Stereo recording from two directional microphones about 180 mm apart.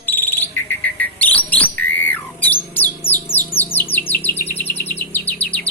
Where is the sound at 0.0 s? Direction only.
10° left (ahead or behind).